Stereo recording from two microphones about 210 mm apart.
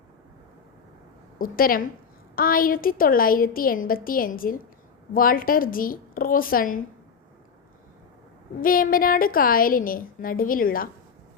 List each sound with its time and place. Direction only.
1.4 s a woman's voice: 45° left (ahead or behind)
8.6 s a woman's voice: 40° left (ahead or behind)